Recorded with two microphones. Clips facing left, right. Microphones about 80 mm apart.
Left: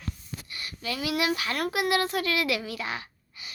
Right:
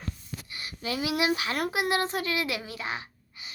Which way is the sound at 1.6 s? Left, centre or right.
Left.